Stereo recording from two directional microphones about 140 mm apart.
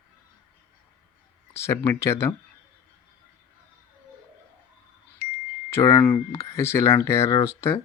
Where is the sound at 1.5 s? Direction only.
20° left (ahead or behind).